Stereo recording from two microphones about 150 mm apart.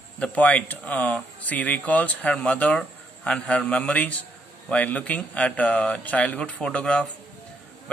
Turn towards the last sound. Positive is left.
turn(degrees=10)  # may be behind; listen again after turning